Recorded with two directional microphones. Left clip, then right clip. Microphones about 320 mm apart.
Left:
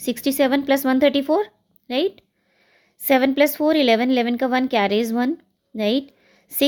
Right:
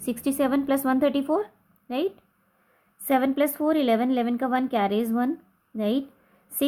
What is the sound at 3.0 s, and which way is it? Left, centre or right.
A woman's voice, left.